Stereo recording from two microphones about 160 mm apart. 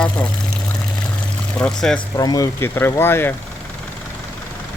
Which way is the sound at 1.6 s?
5° left (ahead or behind).